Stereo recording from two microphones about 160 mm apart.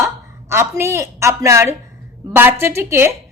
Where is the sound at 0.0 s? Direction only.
15° right (ahead or behind).